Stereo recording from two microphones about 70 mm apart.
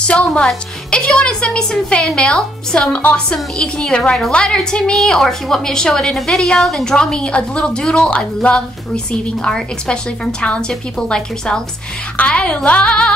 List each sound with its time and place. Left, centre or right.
0.0 s a woman's voice: centre